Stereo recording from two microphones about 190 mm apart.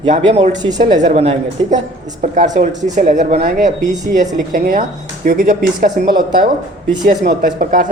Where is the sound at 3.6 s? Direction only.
40° right (ahead or behind).